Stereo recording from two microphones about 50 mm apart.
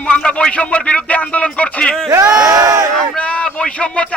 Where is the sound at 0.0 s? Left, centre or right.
Left.